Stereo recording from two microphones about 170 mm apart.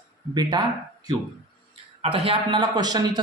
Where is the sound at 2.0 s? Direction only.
35° right (ahead or behind).